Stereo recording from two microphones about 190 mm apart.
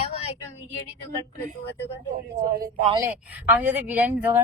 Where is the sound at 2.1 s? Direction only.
50° right (ahead or behind).